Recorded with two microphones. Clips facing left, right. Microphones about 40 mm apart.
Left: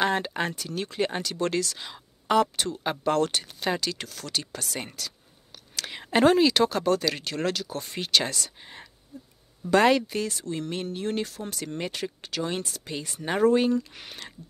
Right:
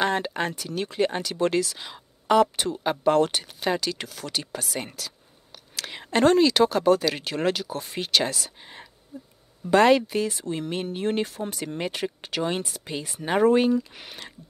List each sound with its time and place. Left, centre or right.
0.0 s speech: centre
9.1 s a sound: right
9.8 s speech: centre
11.0 s speech: right; by 14.3 s centre